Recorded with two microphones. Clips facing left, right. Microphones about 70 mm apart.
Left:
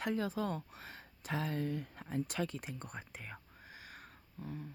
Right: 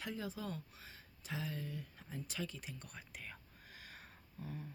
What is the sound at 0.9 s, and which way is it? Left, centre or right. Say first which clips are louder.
Speech: left 7 dB; left.